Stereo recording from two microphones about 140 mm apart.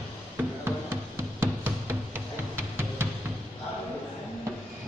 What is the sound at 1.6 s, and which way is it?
Music, 15° right (ahead or behind).